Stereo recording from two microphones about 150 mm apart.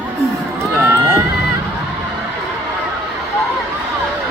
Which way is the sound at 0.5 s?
15° right (ahead or behind).